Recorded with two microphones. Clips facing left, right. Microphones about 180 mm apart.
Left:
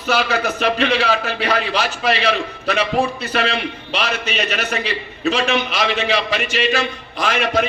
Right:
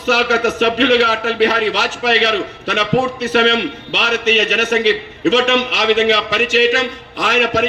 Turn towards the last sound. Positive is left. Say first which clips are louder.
# right 2 dB
turn(degrees=-85)